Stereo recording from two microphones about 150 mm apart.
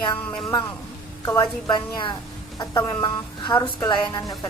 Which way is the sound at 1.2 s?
20° left (ahead or behind).